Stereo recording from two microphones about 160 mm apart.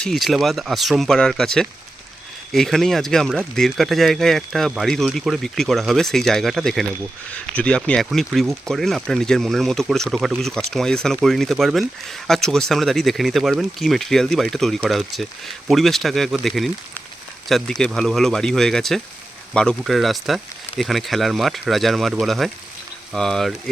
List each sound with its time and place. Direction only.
0.0 s speech: centre (ahead or behind)